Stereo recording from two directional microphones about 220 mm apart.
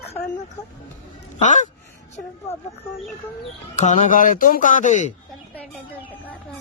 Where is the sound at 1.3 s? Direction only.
35° left (ahead or behind).